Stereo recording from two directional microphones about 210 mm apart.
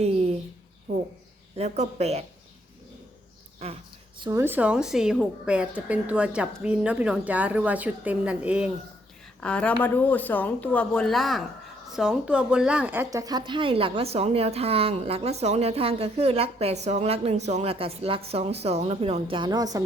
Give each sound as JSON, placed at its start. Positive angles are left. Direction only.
{"t": 0.0, "sound": "a sound", "side_deg": -30}
{"t": 1.5, "sound": "speech", "side_deg": -30}
{"t": 4.2, "sound": "a woman's voice", "side_deg": -15}
{"t": 9.4, "sound": "speech", "side_deg": 5}